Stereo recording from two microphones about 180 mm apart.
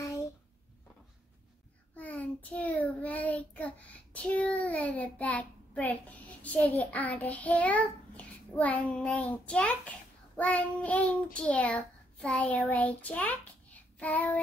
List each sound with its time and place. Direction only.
2.0 s child singing: 10° left (ahead or behind)
11.3 s a child's voice: 5° left (ahead or behind)